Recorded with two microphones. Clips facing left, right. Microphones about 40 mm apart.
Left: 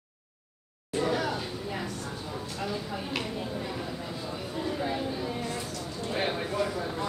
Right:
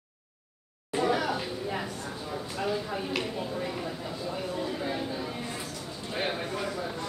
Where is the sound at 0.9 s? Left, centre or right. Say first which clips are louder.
Right 2 dB; centre.